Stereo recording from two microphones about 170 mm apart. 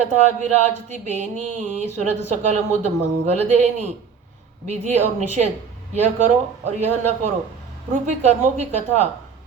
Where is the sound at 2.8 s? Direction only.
40° right (ahead or behind).